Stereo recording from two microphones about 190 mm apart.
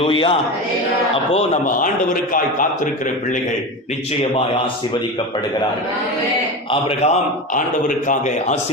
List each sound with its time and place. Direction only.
0.0 s a man's voice: 30° left (ahead or behind); by 2.9 s 45° left (ahead or behind)
6.7 s a man's voice: 30° left (ahead or behind)
7.5 s a man's voice: 45° left (ahead or behind)